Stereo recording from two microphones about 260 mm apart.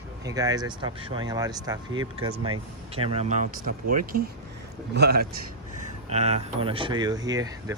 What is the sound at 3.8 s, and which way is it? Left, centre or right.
Speech, right.